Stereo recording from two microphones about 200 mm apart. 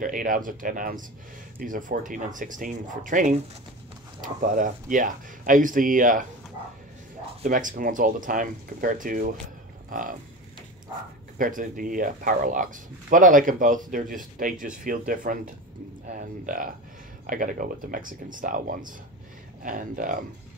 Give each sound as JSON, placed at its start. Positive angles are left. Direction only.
{"t": 0.0, "sound": "speech", "side_deg": -40}
{"t": 7.4, "sound": "speech", "side_deg": -45}
{"t": 11.3, "sound": "speech", "side_deg": -40}